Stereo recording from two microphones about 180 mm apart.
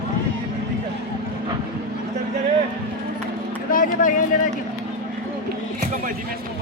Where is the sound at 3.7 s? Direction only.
50° left (ahead or behind).